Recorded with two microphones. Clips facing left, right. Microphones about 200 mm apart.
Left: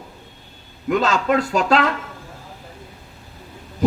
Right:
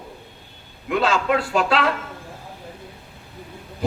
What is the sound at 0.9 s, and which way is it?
Speech, 40° left (ahead or behind).